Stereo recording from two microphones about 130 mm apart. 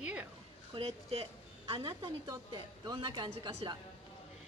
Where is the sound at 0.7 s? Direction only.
50° right (ahead or behind).